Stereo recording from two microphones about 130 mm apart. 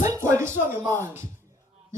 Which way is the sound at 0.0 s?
25° right (ahead or behind).